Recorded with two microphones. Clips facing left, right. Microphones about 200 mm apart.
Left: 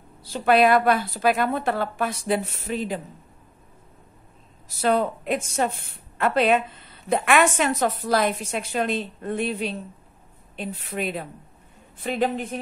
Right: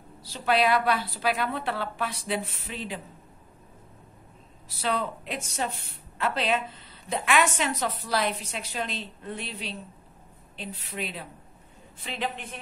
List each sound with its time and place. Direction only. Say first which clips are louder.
0.2 s a woman's voice: left 6 dB; 50° left (ahead or behind)
4.6 s a woman's voice: left 7 dB; 45° left (ahead or behind)